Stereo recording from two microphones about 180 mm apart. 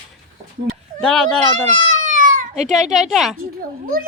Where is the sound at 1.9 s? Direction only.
45° right (ahead or behind).